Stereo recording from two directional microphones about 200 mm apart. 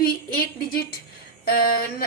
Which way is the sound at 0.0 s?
50° left (ahead or behind).